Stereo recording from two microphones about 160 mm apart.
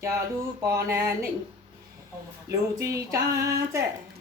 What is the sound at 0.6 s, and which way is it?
Female singing, 20° right (ahead or behind).